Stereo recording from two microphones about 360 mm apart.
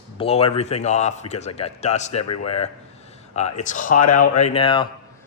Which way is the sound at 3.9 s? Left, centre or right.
Left.